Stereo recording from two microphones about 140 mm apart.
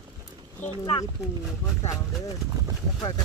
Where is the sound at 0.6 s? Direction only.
60° left (ahead or behind).